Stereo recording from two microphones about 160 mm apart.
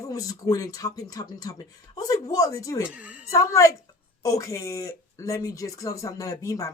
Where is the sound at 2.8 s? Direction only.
10° right (ahead or behind).